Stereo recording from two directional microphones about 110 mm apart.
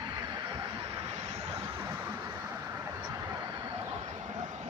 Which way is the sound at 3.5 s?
45° right (ahead or behind).